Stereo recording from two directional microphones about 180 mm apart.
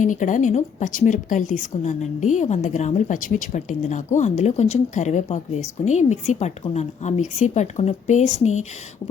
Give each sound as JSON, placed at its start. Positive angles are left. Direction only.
{"t": 0.0, "sound": "a woman's voice", "side_deg": 45}